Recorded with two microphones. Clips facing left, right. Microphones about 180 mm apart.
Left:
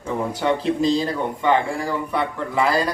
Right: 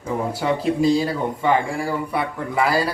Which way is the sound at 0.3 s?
5° right (ahead or behind).